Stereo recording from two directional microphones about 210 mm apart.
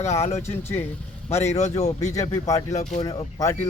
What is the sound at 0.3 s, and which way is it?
Speech, 10° left (ahead or behind).